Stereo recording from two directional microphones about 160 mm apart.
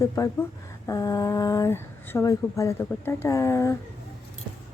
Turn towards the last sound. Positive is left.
turn(degrees=20)  # may be behind; listen again after turning